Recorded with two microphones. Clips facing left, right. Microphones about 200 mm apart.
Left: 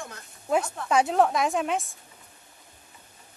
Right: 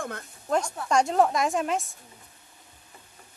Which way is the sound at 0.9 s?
5° left (ahead or behind).